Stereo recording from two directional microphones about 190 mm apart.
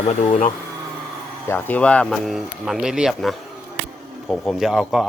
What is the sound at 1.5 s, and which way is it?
Speech, 10° left (ahead or behind).